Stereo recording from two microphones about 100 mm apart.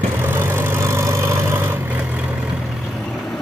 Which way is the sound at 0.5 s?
25° right (ahead or behind).